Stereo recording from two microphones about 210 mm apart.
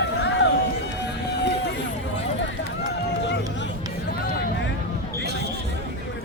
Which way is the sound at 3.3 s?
55° left (ahead or behind).